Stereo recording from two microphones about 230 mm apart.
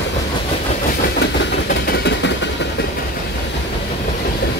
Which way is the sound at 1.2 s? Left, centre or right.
Left.